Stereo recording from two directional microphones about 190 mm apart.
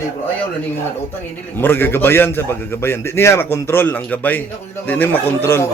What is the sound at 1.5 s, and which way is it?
A man's voice, 10° left (ahead or behind).